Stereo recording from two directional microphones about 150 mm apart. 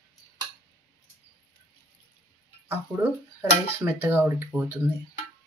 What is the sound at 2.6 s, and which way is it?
Speech, 15° right (ahead or behind).